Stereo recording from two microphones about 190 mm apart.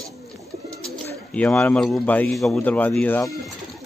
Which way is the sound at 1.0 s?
5° left (ahead or behind).